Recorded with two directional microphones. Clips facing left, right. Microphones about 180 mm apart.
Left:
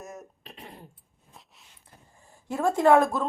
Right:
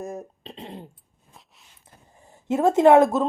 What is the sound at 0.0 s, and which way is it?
Throat clearing, 30° right (ahead or behind).